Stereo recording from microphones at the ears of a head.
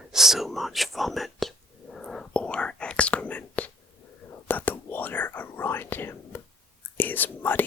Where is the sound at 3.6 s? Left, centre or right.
Left.